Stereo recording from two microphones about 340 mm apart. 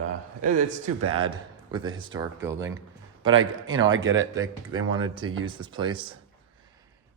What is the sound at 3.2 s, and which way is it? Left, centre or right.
Speech, right.